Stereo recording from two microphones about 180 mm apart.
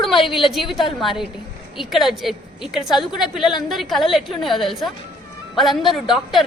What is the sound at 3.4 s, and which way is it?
Speech, 25° left (ahead or behind).